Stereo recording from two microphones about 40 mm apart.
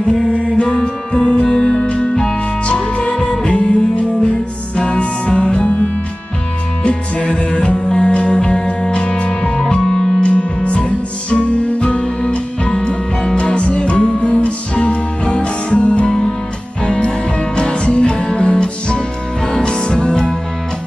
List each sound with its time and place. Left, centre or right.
0.6 s music: left
3.5 s music: left
6.8 s music: left